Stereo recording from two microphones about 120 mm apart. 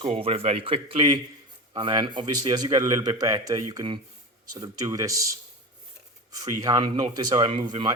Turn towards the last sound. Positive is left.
turn(degrees=-40)  # may be behind; listen again after turning